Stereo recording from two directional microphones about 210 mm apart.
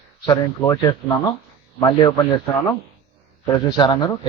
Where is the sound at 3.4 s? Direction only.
20° left (ahead or behind).